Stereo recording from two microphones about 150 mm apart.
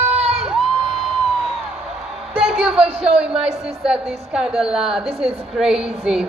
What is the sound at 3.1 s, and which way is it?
A woman's voice, 5° right (ahead or behind).